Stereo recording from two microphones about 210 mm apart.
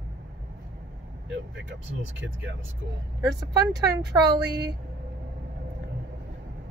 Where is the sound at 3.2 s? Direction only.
20° right (ahead or behind).